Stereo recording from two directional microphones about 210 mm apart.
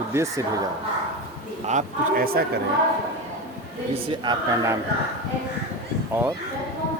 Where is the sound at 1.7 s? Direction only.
40° right (ahead or behind).